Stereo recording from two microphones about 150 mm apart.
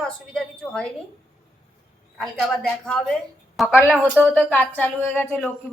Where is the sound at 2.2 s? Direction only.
Centre (ahead or behind).